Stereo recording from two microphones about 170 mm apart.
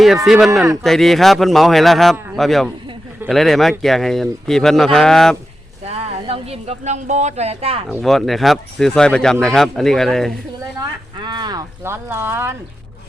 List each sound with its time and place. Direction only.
0.3 s speech: centre (ahead or behind)
5.8 s speech: 35° right (ahead or behind)
7.9 s speech: centre (ahead or behind)
11.3 s speech: 25° right (ahead or behind)